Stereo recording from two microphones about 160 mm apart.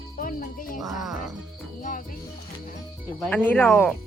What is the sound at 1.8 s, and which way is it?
Speech, 55° left (ahead or behind).